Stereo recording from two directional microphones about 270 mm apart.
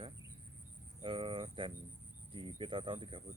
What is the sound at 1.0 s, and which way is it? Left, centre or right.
Speech, centre.